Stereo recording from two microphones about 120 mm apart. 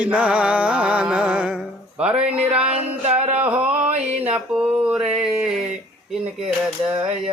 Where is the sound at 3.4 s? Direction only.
10° right (ahead or behind).